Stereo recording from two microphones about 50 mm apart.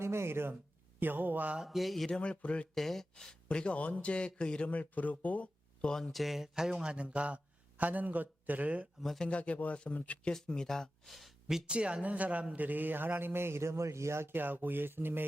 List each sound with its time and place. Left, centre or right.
0.0 s speech: right
0.9 s speech: right
1.5 s speech: centre
2.0 s speech: left
2.7 s speech: centre
4.7 s speech: left
5.8 s speech: centre; by 8.9 s right
9.0 s speech: centre
9.2 s speech: left; by 11.3 s centre
11.4 s a man's voice: centre; by 14.3 s right
14.3 s a man's voice: right